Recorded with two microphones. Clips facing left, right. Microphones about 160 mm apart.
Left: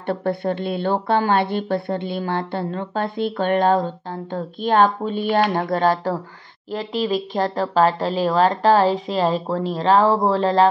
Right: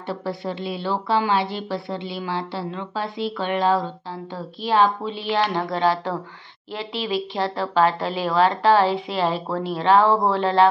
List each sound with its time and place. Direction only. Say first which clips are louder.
0.0 s a woman's voice: left 5 dB; 55° left (ahead or behind); by 10.7 s 35° left (ahead or behind)